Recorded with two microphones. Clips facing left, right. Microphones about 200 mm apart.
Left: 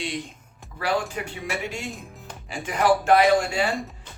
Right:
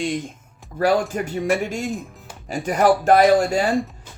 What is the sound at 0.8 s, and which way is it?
A man's voice, 45° right (ahead or behind).